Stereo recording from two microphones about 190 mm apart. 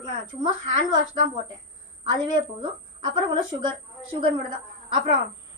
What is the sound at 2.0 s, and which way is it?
A woman's voice, 25° right (ahead or behind).